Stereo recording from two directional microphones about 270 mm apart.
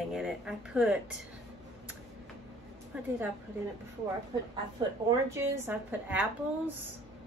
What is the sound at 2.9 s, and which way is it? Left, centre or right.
Speech, centre.